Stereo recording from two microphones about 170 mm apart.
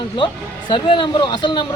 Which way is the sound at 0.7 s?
25° left (ahead or behind).